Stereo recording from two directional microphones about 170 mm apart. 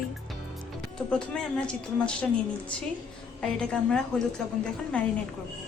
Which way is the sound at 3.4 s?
5° left (ahead or behind).